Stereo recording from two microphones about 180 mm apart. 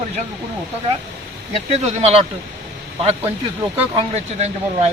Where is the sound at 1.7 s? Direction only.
35° right (ahead or behind).